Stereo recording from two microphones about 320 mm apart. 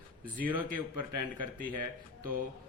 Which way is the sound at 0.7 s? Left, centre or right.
Right.